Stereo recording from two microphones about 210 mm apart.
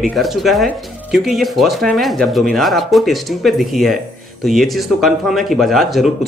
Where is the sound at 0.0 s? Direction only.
Centre (ahead or behind).